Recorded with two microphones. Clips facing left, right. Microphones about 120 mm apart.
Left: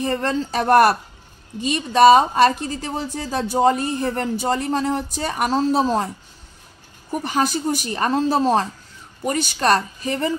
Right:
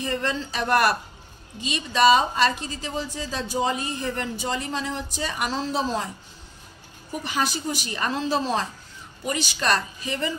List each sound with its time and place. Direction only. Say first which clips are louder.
0.0 s a woman's voice: left 5 dB; 50° left (ahead or behind)
7.1 s a woman's voice: left 6 dB; 50° left (ahead or behind)